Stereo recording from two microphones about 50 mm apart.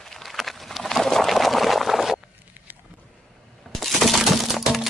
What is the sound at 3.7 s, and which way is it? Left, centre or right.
Coin, centre.